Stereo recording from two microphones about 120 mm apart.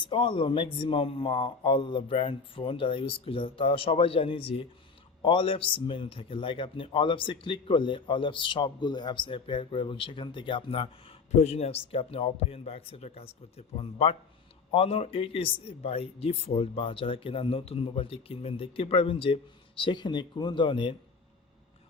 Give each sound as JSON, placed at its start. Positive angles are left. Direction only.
{"t": 0.0, "sound": "speech", "side_deg": 50}
{"t": 11.3, "sound": "a man's voice", "side_deg": 60}